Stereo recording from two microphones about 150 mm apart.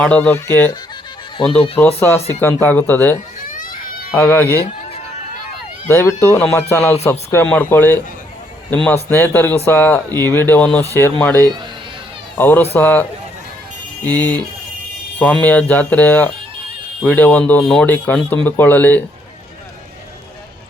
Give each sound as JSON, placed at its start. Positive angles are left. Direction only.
{"t": 0.0, "sound": "speech", "side_deg": 10}
{"t": 1.4, "sound": "speech", "side_deg": 35}
{"t": 2.0, "sound": "speech", "side_deg": 15}
{"t": 3.4, "sound": "a sound", "side_deg": 65}
{"t": 4.2, "sound": "speech", "side_deg": 15}
{"t": 5.9, "sound": "speech", "side_deg": 15}